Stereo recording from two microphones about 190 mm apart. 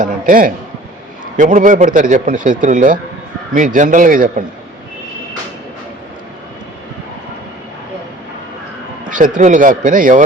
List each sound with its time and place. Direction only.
0.0 s a man's voice: 45° right (ahead or behind)
9.0 s speech: 45° right (ahead or behind)